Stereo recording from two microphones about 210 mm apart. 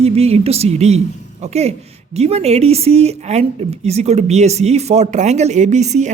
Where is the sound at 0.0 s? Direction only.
30° right (ahead or behind).